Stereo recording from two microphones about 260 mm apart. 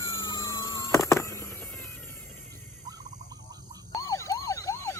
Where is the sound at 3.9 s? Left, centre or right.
Centre.